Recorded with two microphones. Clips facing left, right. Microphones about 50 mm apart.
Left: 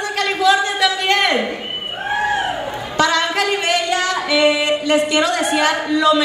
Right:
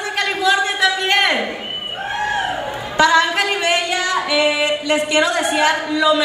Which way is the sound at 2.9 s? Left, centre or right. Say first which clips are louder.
Right 3 dB; centre.